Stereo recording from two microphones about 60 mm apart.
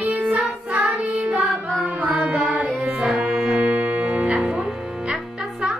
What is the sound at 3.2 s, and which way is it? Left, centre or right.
Music, centre.